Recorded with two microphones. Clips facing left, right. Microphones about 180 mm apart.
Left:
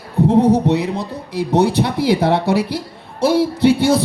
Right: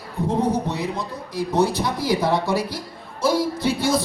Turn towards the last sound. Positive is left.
turn(degrees=65)  # may be behind; listen again after turning